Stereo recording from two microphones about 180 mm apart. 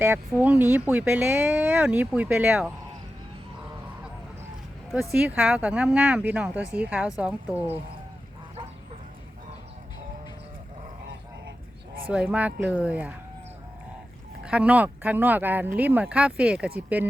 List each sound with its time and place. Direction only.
0.0 s speech: 10° right (ahead or behind)
4.9 s speech: centre (ahead or behind)
12.0 s speech: 5° right (ahead or behind)
14.4 s speech: 5° right (ahead or behind)